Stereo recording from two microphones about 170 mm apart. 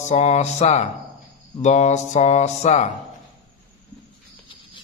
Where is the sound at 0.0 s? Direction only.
40° left (ahead or behind).